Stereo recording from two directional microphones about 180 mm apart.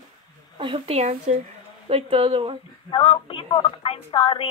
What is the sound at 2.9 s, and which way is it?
Speech, 30° left (ahead or behind).